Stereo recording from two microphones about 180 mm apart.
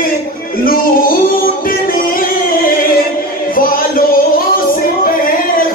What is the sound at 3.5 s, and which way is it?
Music, 50° left (ahead or behind).